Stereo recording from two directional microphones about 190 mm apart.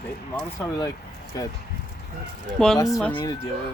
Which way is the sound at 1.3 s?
20° left (ahead or behind).